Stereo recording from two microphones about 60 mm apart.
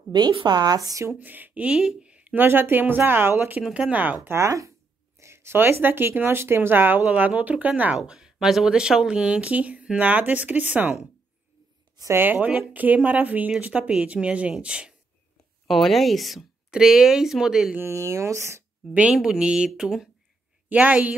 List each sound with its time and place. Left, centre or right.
0.7 s speech: right
1.2 s speech: right
2.3 s speech: right
3.6 s speech: centre
3.9 s speech: right
4.3 s speech: right
7.1 s speech: right
8.0 s speech: centre; by 11.0 s right
12.1 s speech: right; by 15.0 s centre
15.7 s speech: centre
17.7 s speech: right
19.1 s speech: centre
20.7 s speech: right